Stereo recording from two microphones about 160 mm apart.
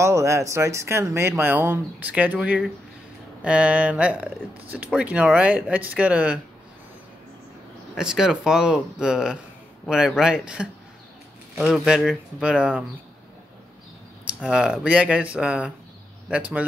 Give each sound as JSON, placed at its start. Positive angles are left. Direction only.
{"t": 0.0, "sound": "speech", "side_deg": -20}
{"t": 7.9, "sound": "speech", "side_deg": -5}
{"t": 14.2, "sound": "speech", "side_deg": -5}